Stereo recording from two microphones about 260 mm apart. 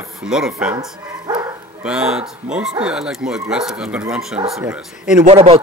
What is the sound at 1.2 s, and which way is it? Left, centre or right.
Bow-wow, centre.